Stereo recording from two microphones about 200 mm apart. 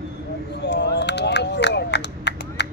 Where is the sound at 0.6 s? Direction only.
60° left (ahead or behind).